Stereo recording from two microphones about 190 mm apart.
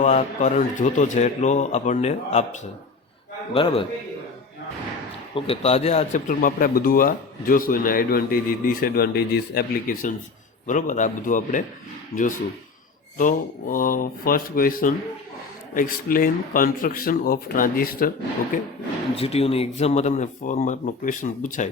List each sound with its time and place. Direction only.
0.0 s a man's voice: 40° left (ahead or behind)
5.3 s speech: 30° left (ahead or behind)
19.1 s speech: 30° left (ahead or behind)